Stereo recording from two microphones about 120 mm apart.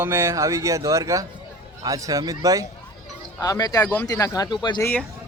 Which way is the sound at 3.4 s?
30° left (ahead or behind).